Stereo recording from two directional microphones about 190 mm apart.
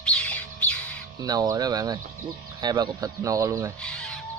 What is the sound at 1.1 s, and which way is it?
Speech, 20° right (ahead or behind).